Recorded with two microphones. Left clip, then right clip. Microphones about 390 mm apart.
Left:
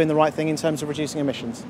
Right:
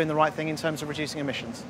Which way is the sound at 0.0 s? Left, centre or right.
Right.